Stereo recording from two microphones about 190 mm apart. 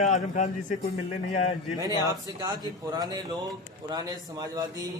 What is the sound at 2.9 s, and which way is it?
Speech, 20° right (ahead or behind).